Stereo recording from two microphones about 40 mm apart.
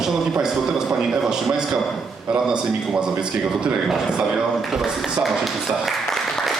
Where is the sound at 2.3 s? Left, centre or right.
Centre.